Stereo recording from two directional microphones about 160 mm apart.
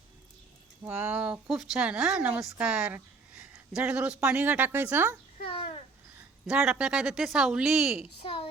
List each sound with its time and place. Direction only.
0.9 s speech: 10° right (ahead or behind)
5.5 s a sound: 35° left (ahead or behind)
6.5 s speech: 5° right (ahead or behind)
8.2 s speech: 35° left (ahead or behind)